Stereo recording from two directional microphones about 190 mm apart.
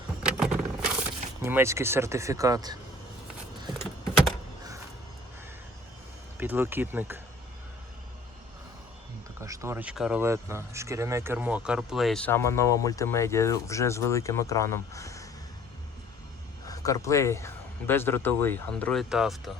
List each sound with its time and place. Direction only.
0.2 s vehicle: 5° right (ahead or behind)
1.4 s speech: 15° right (ahead or behind)
6.3 s speech: 10° right (ahead or behind)
9.4 s speech: 15° right (ahead or behind); by 15.3 s 15° left (ahead or behind)
16.6 s speech: 20° left (ahead or behind); by 19.4 s centre (ahead or behind)